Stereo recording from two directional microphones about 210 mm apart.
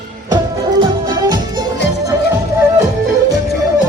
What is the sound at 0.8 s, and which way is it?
Music, 20° right (ahead or behind).